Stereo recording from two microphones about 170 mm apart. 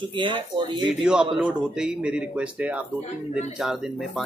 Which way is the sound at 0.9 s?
5° right (ahead or behind).